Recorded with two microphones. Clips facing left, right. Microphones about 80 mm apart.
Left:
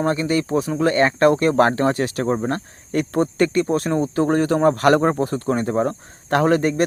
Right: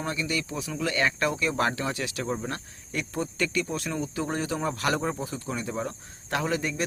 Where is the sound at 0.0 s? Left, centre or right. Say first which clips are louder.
Left 10 dB; left.